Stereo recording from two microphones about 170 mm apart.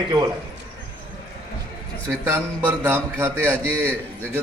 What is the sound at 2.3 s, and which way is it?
A man's voice, 15° right (ahead or behind).